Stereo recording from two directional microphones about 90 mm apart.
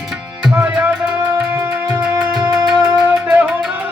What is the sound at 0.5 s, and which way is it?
Music, 20° right (ahead or behind).